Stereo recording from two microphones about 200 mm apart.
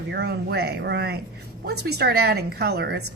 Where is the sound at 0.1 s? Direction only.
55° right (ahead or behind).